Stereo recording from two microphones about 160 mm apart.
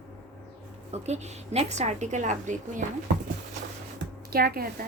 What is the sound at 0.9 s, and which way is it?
A woman's voice, 45° right (ahead or behind).